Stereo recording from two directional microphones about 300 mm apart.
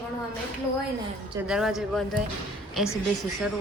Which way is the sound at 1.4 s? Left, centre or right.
Centre.